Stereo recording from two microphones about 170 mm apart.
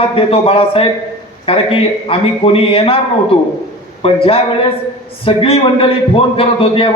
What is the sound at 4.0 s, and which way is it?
A man's voice, 35° left (ahead or behind).